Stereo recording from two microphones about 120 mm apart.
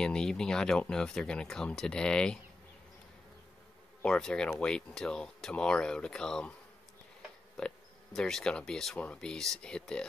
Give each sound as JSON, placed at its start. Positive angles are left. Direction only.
{"t": 0.0, "sound": "speech", "side_deg": 5}
{"t": 4.0, "sound": "speech", "side_deg": 5}
{"t": 7.5, "sound": "speech", "side_deg": 5}